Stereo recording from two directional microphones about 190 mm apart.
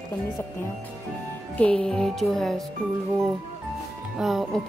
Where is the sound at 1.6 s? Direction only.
5° left (ahead or behind).